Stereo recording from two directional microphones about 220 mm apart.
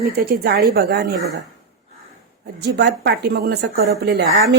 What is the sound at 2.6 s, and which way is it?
A woman's voice, 50° right (ahead or behind).